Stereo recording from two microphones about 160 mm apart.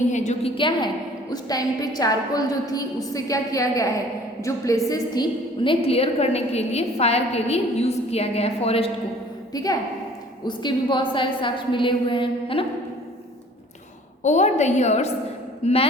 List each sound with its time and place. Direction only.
0.1 s a woman's voice: 45° left (ahead or behind)
0.5 s a woman's voice: 30° left (ahead or behind)
9.5 s a woman's voice: 25° left (ahead or behind)
14.3 s a woman's voice: 50° left (ahead or behind)